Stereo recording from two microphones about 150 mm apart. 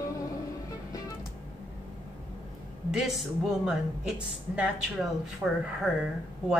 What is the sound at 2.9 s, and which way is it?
A woman's voice, centre (ahead or behind).